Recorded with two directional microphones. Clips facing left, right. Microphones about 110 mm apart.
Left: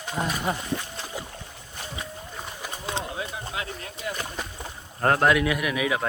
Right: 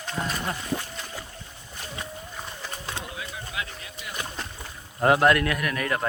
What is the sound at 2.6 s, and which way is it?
Clip-clop, 20° left (ahead or behind).